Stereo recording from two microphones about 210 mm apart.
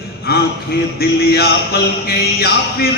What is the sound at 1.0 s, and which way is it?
Speech, 45° left (ahead or behind).